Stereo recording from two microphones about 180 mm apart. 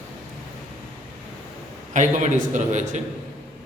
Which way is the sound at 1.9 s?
45° right (ahead or behind).